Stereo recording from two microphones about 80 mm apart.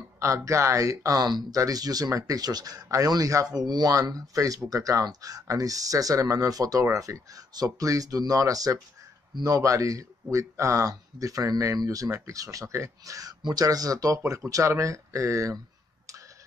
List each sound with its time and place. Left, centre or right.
0.2 s speech: right